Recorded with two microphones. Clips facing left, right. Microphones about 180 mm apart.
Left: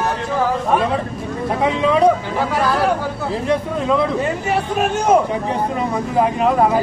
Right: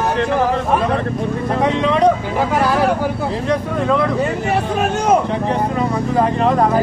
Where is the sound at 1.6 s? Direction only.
5° left (ahead or behind).